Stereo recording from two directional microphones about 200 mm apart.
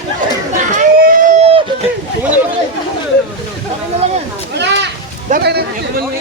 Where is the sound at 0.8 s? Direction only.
40° right (ahead or behind).